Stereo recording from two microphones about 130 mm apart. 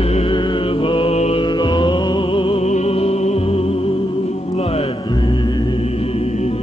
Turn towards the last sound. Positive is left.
turn(degrees=55)  # may be behind; listen again after turning